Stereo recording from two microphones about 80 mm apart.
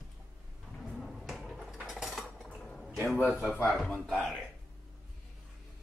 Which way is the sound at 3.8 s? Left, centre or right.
Centre.